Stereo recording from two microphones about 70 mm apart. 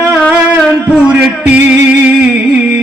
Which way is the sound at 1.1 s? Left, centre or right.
Centre.